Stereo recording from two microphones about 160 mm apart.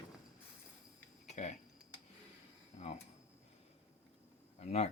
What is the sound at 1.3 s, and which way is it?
Typing, 45° left (ahead or behind).